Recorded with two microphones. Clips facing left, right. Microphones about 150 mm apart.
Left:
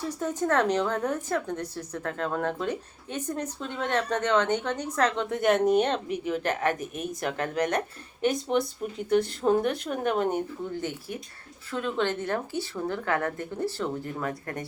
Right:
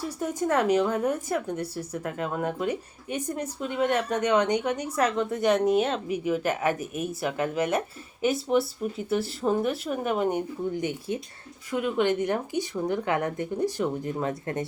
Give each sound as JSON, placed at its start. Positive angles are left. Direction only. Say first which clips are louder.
{"t": 0.2, "sound": "a woman's voice", "louder": "even", "side_deg": -10}
{"t": 10.8, "sound": "a woman's voice", "louder": "right 4 dB", "side_deg": -15}